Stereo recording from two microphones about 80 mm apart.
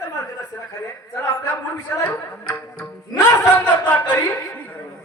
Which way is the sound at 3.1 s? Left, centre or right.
Left.